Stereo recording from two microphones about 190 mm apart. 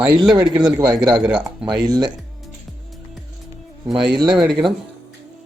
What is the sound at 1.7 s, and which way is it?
Speech, 20° right (ahead or behind).